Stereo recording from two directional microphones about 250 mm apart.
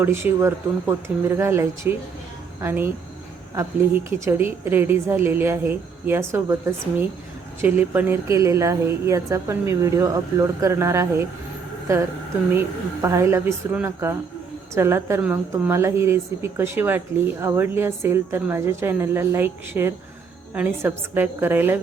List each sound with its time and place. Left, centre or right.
0.0 s a woman's voice: centre
12.5 s a woman's voice: centre